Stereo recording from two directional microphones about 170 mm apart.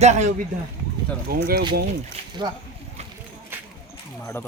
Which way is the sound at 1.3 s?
65° right (ahead or behind).